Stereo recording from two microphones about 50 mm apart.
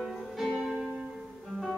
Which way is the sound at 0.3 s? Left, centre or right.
Centre.